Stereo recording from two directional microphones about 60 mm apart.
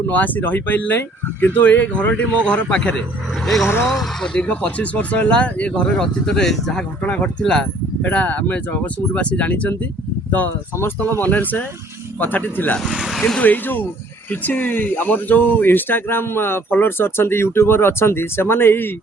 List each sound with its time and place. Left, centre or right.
0.1 s speech: left
3.4 s speech: centre
4.4 s speech: left; by 6.8 s centre
7.0 s speech: centre
8.0 s speech: left
11.2 s speech: left
12.9 s speech: centre
13.1 s speech: centre
13.4 s speech: left